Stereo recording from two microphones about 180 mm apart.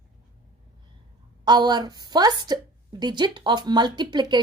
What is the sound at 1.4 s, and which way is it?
A woman's voice, 25° right (ahead or behind).